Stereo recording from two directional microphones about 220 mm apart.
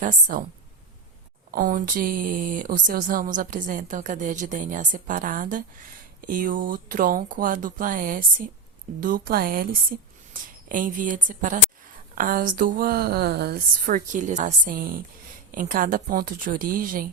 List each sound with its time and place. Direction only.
0.0 s speech: 35° right (ahead or behind)
1.5 s speech: 40° right (ahead or behind)